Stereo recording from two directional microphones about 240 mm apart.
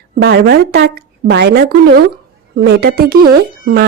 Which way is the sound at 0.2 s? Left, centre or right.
Right.